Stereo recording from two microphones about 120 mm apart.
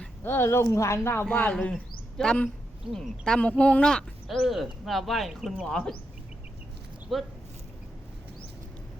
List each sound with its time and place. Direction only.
0.0 s speech: 20° left (ahead or behind)
7.1 s speech: centre (ahead or behind)